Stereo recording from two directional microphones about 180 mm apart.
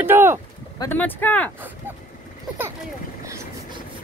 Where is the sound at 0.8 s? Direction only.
10° left (ahead or behind).